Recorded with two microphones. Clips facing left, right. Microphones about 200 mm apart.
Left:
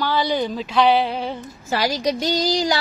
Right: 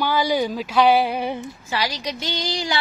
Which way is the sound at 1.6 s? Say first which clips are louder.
Left 6 dB; 45° left (ahead or behind).